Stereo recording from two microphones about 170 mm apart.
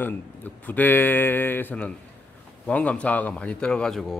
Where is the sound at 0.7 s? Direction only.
10° left (ahead or behind).